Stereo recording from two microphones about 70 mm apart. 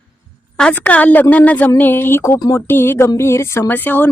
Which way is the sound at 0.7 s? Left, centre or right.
Left.